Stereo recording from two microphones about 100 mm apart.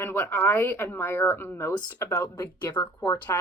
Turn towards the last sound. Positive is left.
turn(degrees=30)  # may be behind; listen again after turning